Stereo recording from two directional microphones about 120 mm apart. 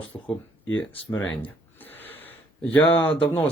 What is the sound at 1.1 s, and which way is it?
Speech, 15° left (ahead or behind).